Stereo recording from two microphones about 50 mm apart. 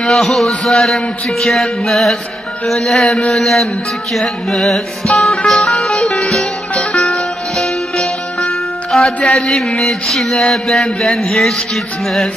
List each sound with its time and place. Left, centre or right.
0.0 s mantra: centre
4.1 s music: centre
9.3 s mantra: centre